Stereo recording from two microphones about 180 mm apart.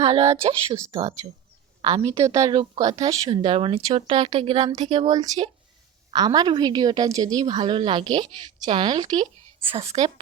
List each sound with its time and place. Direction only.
0.0 s a woman's voice: 35° right (ahead or behind)
9.6 s speech: 35° right (ahead or behind)